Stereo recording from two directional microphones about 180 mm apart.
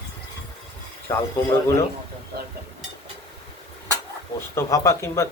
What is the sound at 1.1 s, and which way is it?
Speech, 20° left (ahead or behind).